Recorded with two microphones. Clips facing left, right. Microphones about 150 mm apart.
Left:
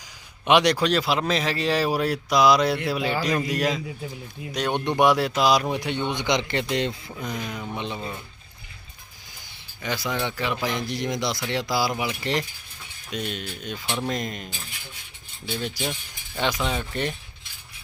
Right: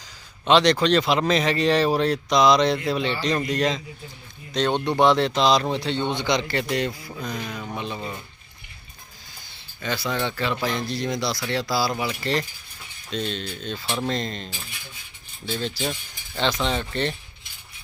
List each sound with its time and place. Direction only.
0.4 s speech: 10° left (ahead or behind)
4.9 s a man's voice: 10° left (ahead or behind)
9.5 s a man's voice: 15° left (ahead or behind)
13.8 s speech: 5° right (ahead or behind)
14.1 s a man's voice: 10° left (ahead or behind)